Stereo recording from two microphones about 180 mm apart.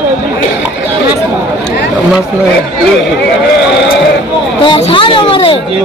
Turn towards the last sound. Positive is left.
turn(degrees=30)  # may be behind; listen again after turning